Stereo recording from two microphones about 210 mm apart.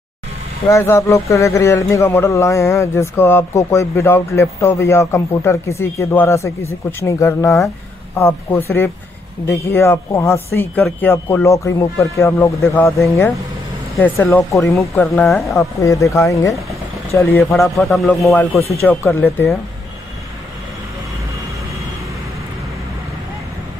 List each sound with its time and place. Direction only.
0.7 s speech: 15° left (ahead or behind)
18.2 s speech: 10° left (ahead or behind)